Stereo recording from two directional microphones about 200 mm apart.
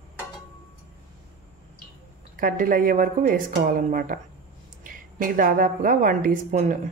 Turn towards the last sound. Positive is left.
turn(degrees=-40)  # may be behind; listen again after turning